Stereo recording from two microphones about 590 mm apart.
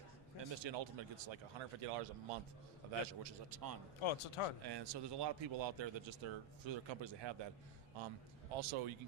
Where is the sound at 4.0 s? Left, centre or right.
Left.